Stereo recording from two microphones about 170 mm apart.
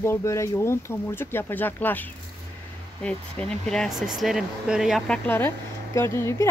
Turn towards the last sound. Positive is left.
turn(degrees=15)  # may be behind; listen again after turning